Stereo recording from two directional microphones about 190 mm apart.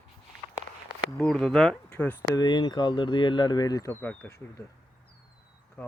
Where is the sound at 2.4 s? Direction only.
25° left (ahead or behind).